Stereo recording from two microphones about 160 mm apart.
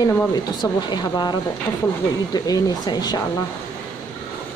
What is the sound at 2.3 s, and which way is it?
Speech, 25° left (ahead or behind).